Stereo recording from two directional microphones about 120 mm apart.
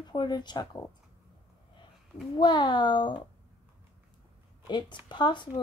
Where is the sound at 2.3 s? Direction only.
40° left (ahead or behind).